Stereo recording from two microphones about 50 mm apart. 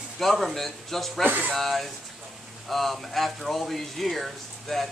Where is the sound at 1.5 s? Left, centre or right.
Centre.